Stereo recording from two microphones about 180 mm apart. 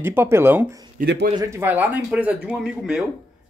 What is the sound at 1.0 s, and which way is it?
Speech, 65° right (ahead or behind).